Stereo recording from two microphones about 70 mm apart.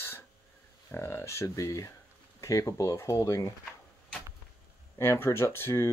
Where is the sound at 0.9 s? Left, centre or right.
Left.